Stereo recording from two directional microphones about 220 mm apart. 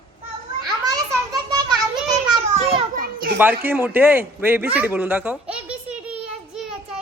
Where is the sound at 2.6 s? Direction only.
30° right (ahead or behind).